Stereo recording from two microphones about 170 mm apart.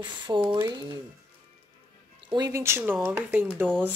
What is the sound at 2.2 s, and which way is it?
Speech, 25° right (ahead or behind).